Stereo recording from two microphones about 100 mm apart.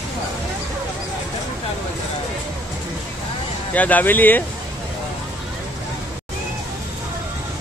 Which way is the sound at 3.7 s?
15° left (ahead or behind).